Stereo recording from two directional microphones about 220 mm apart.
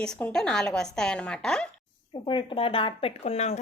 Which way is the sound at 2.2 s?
25° left (ahead or behind).